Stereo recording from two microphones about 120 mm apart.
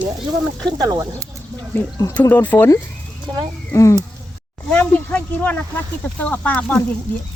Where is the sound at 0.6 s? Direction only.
35° right (ahead or behind).